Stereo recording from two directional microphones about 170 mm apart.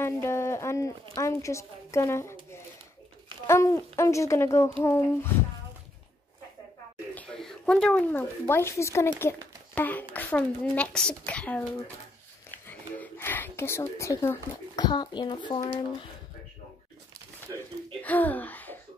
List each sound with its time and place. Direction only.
0.0 s a child's voice: 15° left (ahead or behind)
3.4 s a child's voice: 15° left (ahead or behind)
7.2 s a child's voice: 5° left (ahead or behind)
12.6 s speech: 10° left (ahead or behind)
14.9 s speech: 25° left (ahead or behind)
18.0 s speech: 10° left (ahead or behind)